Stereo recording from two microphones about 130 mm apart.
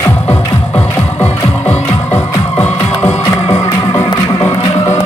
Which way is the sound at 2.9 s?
55° left (ahead or behind).